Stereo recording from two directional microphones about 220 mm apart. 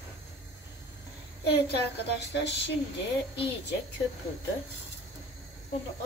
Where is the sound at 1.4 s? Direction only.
50° left (ahead or behind).